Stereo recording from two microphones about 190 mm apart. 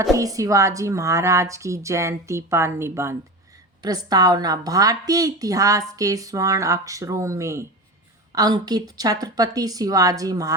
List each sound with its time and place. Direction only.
0.0 s a woman's voice: 20° right (ahead or behind)